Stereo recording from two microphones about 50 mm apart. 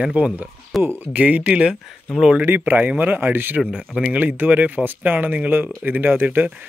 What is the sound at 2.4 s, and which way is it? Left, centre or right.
Speech, right.